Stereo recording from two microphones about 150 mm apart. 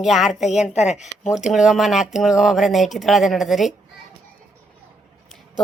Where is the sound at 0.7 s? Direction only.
50° left (ahead or behind).